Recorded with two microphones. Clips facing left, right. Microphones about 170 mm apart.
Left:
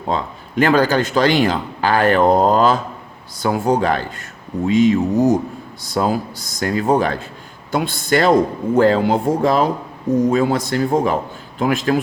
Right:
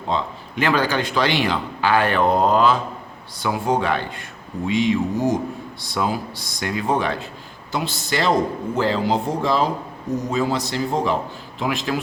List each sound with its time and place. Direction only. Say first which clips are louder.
0.1 s a man's voice: left 2 dB; 45° left (ahead or behind)